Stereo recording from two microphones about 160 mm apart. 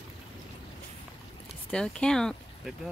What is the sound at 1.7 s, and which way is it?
Speech, 5° left (ahead or behind).